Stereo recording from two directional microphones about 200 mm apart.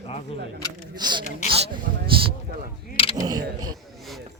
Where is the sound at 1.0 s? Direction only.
20° right (ahead or behind).